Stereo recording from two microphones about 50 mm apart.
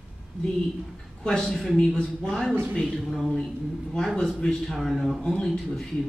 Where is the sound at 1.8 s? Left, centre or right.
Left.